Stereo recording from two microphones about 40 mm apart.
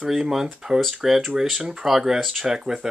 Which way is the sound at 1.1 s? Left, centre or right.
Centre.